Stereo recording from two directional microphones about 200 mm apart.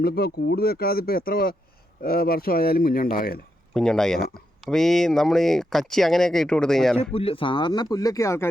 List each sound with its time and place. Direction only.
0.0 s speech: 50° left (ahead or behind)
3.8 s speech: 5° left (ahead or behind)
7.1 s speech: 30° left (ahead or behind)